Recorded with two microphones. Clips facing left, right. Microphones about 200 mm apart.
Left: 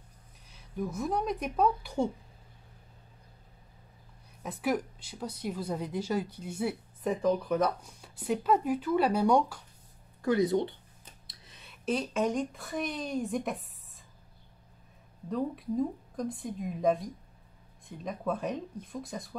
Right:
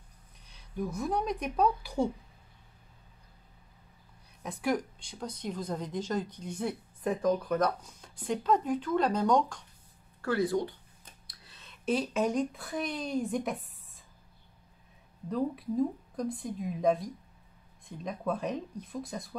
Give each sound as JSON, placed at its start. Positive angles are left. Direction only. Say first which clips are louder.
{"t": 0.5, "sound": "speech", "louder": "even", "side_deg": 0}
{"t": 4.4, "sound": "a woman's voice", "louder": "even", "side_deg": 0}
{"t": 10.2, "sound": "speech", "louder": "left 3 dB", "side_deg": 20}
{"t": 11.2, "sound": "a sound", "louder": "left 1 dB", "side_deg": 15}
{"t": 11.8, "sound": "a woman's voice", "louder": "right 1 dB", "side_deg": 0}
{"t": 15.2, "sound": "a woman's voice", "louder": "right 1 dB", "side_deg": 0}